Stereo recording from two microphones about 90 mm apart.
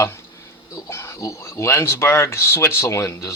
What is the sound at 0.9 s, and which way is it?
Speech, 35° left (ahead or behind).